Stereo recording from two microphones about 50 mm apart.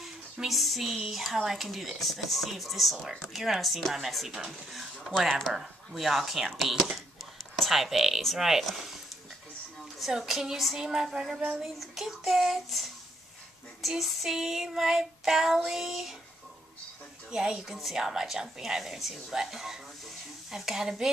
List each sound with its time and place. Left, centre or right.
0.0 s a woman's voice: centre
9.9 s a woman's voice: centre
11.3 s child singing: centre
11.6 s a woman's voice: centre
17.3 s a woman's voice: centre